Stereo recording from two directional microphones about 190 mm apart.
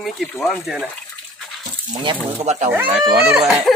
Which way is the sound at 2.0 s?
30° right (ahead or behind).